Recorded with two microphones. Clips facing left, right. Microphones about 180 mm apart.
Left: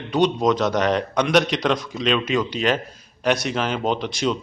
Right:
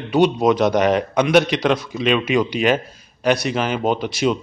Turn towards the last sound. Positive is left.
turn(degrees=-5)  # may be behind; listen again after turning